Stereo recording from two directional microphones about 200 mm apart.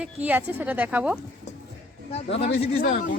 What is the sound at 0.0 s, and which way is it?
A woman's voice, 10° right (ahead or behind).